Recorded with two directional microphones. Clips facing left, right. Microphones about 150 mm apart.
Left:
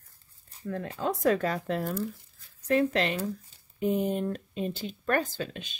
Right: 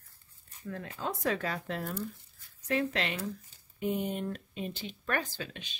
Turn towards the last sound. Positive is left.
turn(degrees=45)  # may be behind; listen again after turning